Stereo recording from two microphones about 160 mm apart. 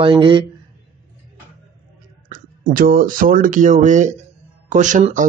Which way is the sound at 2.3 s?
60° right (ahead or behind).